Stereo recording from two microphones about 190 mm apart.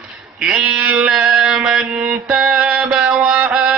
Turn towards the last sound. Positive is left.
turn(degrees=-5)  # may be behind; listen again after turning